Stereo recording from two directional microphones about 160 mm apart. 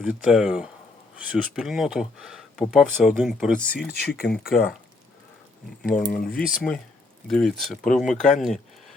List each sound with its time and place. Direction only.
0.0 s speech: 5° right (ahead or behind)
3.8 s speech: 70° left (ahead or behind)
6.1 s speech: 70° left (ahead or behind)
6.6 s speech: 5° left (ahead or behind)